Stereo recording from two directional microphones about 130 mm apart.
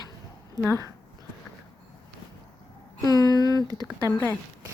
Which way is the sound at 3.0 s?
30° left (ahead or behind).